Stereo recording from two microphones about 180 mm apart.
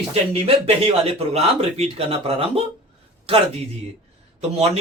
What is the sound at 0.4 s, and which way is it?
Speech, 30° right (ahead or behind).